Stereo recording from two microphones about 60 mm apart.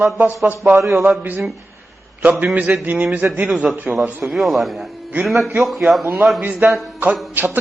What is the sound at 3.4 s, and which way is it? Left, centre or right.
A man's voice, centre.